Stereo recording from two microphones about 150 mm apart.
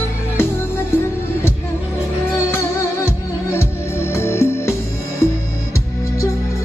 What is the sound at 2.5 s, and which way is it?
Music, 15° left (ahead or behind).